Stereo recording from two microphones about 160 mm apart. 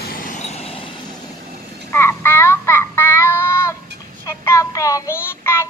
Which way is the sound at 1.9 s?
15° left (ahead or behind).